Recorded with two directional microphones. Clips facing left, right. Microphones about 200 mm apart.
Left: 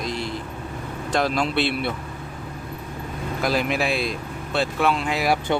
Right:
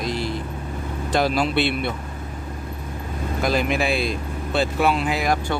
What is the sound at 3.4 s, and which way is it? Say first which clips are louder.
Speech: right 1 dB; centre (ahead or behind).